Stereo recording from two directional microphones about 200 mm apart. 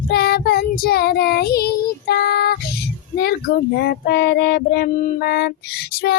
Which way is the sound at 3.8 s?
55° left (ahead or behind).